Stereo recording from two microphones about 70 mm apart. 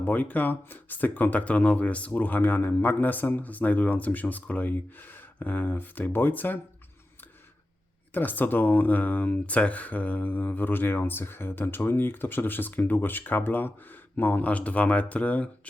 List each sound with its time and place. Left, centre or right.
0.0 s speech: left
8.1 s speech: left